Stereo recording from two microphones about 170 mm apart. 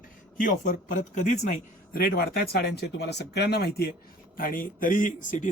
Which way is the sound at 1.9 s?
60° left (ahead or behind).